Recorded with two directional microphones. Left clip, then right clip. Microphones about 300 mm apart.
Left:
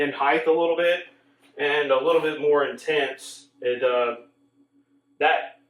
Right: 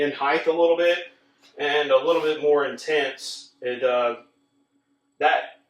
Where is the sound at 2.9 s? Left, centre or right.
Centre.